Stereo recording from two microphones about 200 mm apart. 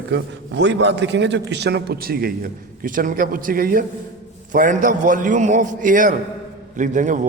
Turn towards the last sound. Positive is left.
turn(degrees=-40)  # may be behind; listen again after turning